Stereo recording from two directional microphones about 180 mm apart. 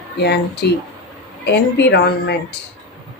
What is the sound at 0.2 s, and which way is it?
Speech, 65° left (ahead or behind).